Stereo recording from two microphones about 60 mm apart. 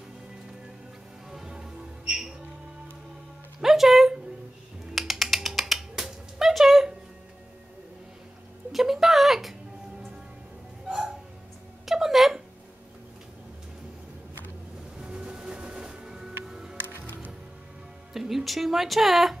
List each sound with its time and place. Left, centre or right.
1.3 s music: centre
3.6 s a sound: centre
8.7 s music: centre
10.9 s hiccup: centre
11.8 s a sound: centre
15.0 s music: centre
16.7 s music: right
18.1 s speech: centre